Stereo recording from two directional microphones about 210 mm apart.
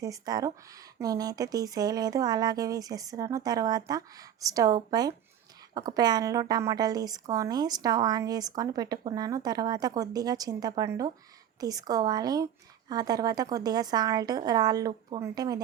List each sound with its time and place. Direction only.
0.0 s speech: 15° right (ahead or behind)